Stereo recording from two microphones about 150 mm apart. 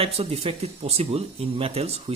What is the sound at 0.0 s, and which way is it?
Speech, 40° right (ahead or behind).